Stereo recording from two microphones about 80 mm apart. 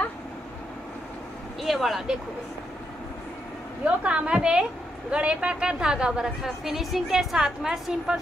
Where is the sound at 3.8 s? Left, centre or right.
Centre.